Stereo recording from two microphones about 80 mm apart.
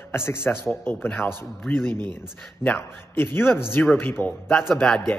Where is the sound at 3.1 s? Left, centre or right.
Left.